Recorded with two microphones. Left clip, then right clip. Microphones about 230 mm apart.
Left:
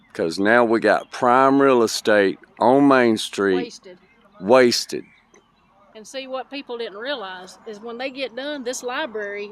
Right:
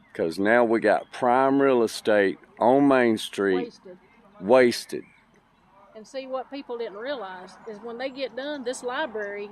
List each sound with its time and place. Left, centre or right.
0.1 s speech: centre
5.9 s speech: left